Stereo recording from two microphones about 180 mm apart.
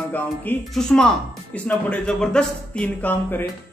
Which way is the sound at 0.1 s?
5° left (ahead or behind).